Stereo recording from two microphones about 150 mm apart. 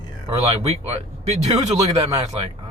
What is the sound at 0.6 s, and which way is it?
Speech, 45° right (ahead or behind).